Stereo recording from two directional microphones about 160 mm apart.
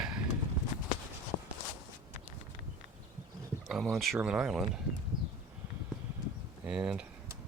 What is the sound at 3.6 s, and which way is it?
Speech, centre (ahead or behind).